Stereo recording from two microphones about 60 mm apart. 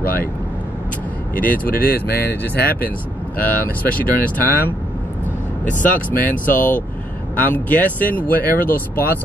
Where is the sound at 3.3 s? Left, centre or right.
Left.